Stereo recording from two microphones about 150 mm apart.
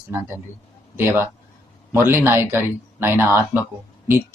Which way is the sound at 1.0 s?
15° right (ahead or behind).